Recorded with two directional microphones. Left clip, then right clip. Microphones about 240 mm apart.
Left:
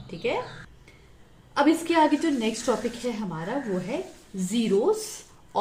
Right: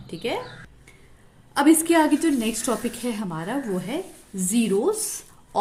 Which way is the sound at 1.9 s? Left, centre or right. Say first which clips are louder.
Right 2 dB; right.